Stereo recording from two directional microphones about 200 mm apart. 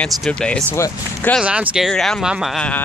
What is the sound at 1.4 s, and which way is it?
Speech, 5° right (ahead or behind).